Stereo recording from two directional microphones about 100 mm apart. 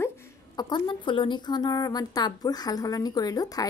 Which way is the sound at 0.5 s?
45° left (ahead or behind).